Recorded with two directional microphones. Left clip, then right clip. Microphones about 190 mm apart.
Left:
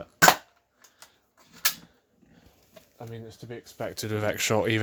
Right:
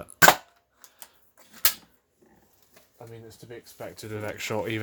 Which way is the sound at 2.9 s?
40° left (ahead or behind).